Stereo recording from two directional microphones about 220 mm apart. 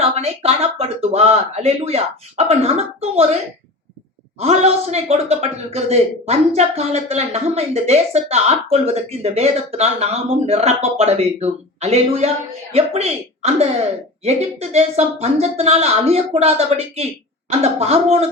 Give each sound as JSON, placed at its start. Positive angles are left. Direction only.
{"t": 0.0, "sound": "speech", "side_deg": -25}
{"t": 4.4, "sound": "speech", "side_deg": -30}